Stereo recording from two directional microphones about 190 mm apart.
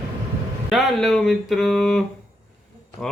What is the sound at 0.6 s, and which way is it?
Speech, centre (ahead or behind).